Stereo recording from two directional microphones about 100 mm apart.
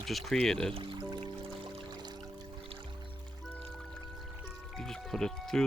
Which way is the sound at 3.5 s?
5° left (ahead or behind).